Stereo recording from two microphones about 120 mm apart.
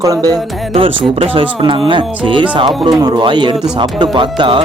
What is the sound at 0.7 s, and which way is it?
Speech, 50° right (ahead or behind).